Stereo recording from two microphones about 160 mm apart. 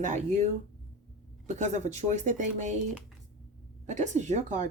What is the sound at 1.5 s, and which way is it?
A woman's voice, 45° right (ahead or behind).